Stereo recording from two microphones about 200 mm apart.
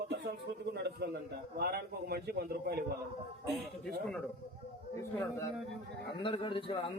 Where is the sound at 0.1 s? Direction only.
55° right (ahead or behind).